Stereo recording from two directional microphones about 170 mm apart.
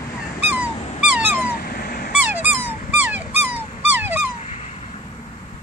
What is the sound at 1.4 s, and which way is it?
Cat, 60° left (ahead or behind).